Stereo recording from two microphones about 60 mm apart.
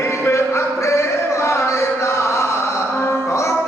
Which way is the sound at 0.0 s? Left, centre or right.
Left.